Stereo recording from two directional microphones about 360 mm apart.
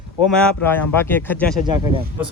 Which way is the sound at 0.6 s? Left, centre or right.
Centre.